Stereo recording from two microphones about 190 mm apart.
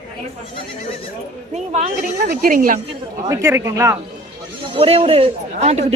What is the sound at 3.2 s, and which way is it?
Speech, 15° right (ahead or behind).